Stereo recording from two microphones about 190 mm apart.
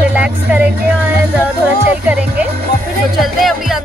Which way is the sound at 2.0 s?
10° right (ahead or behind).